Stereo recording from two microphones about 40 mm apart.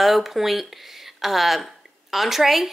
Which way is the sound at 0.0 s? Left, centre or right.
Centre.